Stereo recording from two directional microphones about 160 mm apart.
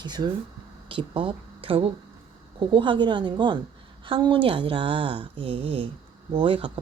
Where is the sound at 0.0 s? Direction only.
25° right (ahead or behind).